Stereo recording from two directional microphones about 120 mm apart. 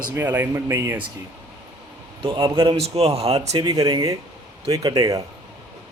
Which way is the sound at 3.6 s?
35° right (ahead or behind).